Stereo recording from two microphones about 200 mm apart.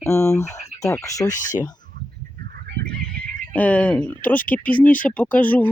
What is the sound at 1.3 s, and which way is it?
Speech, 40° left (ahead or behind).